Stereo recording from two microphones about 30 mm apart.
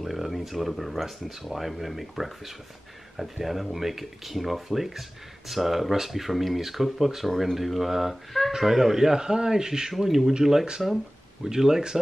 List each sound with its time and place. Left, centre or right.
0.0 s a sound: centre
1.5 s speech: centre
9.9 s speech: centre